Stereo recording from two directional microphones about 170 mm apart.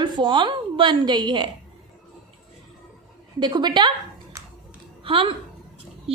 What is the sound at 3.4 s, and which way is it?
A woman's voice, 25° right (ahead or behind).